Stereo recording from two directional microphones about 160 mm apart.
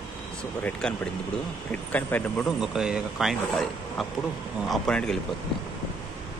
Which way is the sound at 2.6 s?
5° right (ahead or behind).